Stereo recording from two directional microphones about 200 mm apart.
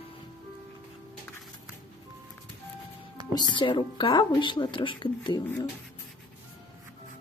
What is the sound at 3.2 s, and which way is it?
Music, 20° right (ahead or behind).